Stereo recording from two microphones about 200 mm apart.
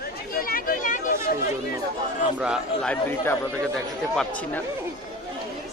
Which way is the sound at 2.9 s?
10° left (ahead or behind).